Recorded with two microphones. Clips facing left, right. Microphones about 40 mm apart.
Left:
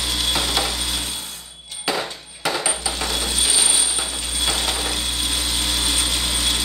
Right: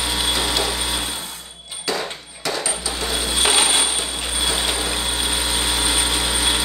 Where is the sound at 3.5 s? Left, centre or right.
Right.